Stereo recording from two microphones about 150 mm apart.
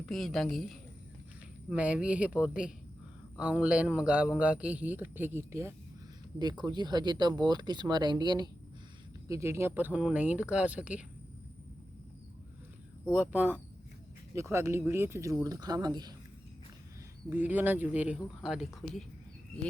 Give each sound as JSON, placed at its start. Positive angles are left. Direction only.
{"t": 0.0, "sound": "a woman's voice", "side_deg": 0}
{"t": 6.4, "sound": "speech", "side_deg": -30}
{"t": 9.3, "sound": "a man's voice", "side_deg": -15}
{"t": 13.1, "sound": "a man's voice", "side_deg": -10}
{"t": 17.2, "sound": "a man's voice", "side_deg": -10}